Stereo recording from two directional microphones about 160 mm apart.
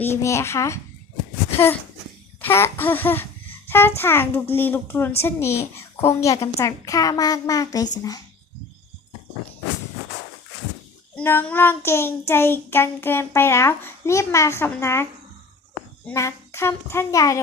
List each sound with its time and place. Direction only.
0.0 s a child's voice: 15° left (ahead or behind)
2.4 s a child's voice: 15° left (ahead or behind)
11.1 s a child's voice: 10° left (ahead or behind)
16.1 s a child's voice: 15° left (ahead or behind)